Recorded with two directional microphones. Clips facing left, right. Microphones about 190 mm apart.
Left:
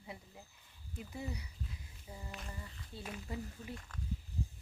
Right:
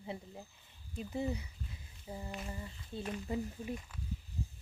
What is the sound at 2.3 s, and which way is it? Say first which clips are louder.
Humming: right 5 dB; 5° right (ahead or behind).